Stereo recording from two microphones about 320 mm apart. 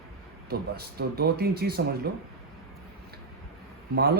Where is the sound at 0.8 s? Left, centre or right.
Right.